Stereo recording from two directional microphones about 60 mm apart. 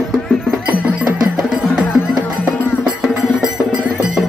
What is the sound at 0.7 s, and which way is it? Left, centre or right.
Music, right.